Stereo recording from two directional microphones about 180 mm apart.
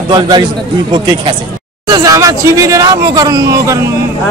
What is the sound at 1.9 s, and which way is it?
Speech, 20° right (ahead or behind).